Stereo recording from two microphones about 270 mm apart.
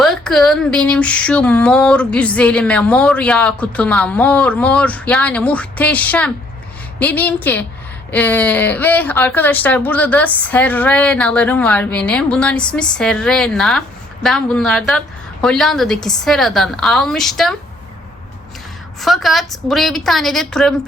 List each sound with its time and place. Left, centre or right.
0.0 s speech: centre
18.9 s speech: centre